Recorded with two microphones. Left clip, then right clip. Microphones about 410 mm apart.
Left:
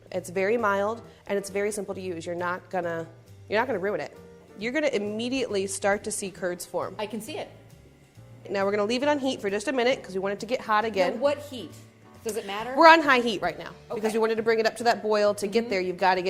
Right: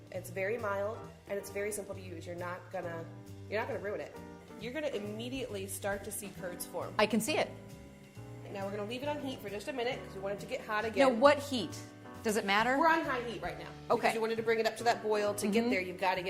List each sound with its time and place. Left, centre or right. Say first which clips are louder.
0.1 s a woman's voice: left 10 dB; left
4.6 s a woman's voice: left 11 dB; left
6.9 s speech: right 3 dB; right
8.5 s a woman's voice: left 14 dB; left
11.2 s speech: even; right
13.1 s a woman's voice: left 13 dB; left
14.2 s speech: left 8 dB; left